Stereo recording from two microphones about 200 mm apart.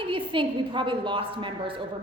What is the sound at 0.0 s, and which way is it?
A woman's voice, 25° right (ahead or behind).